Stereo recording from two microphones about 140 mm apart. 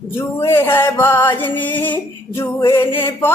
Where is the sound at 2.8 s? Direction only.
40° left (ahead or behind).